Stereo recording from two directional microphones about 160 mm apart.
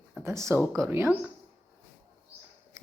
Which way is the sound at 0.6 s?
5° left (ahead or behind).